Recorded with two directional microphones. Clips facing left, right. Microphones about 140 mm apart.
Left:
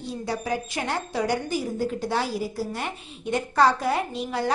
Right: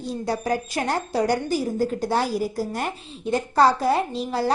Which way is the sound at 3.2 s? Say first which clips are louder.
Right 2 dB; 35° right (ahead or behind).